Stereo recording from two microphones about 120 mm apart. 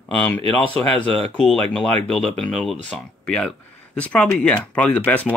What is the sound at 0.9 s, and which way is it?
Speech, 10° left (ahead or behind).